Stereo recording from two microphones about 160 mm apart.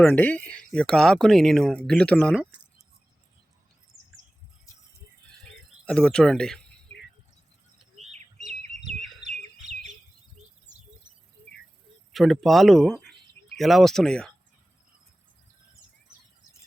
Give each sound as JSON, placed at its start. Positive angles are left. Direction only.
{"t": 0.0, "sound": "speech", "side_deg": 10}
{"t": 5.8, "sound": "speech", "side_deg": 5}
{"t": 7.9, "sound": "bird", "side_deg": -45}
{"t": 12.1, "sound": "speech", "side_deg": 0}